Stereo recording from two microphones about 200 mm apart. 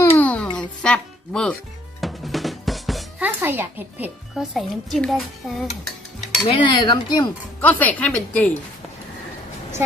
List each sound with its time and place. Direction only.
0.0 s a sound: 10° left (ahead or behind)
0.5 s music: 5° left (ahead or behind)
2.0 s drum: centre (ahead or behind)
6.4 s cutlery: 25° left (ahead or behind)
7.6 s a woman's voice: 10° left (ahead or behind)